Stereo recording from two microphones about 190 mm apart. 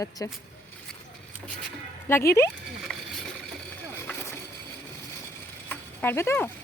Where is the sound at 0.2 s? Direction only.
15° left (ahead or behind).